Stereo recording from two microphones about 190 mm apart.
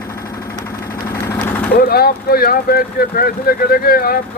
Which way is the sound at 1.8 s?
55° left (ahead or behind).